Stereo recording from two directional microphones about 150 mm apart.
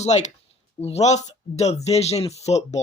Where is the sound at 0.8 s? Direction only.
45° left (ahead or behind).